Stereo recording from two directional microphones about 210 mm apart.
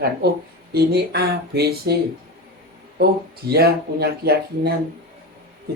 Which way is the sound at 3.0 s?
50° right (ahead or behind).